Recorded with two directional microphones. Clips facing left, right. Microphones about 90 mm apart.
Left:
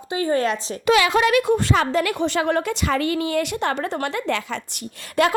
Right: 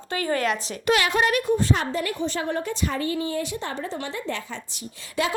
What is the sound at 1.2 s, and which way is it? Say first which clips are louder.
A woman's voice: left 4 dB; 90° left.